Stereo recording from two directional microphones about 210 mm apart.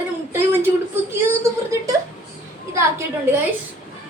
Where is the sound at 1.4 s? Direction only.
15° right (ahead or behind).